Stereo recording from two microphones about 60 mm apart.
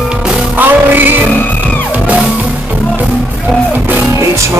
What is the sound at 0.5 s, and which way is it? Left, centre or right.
Music, right.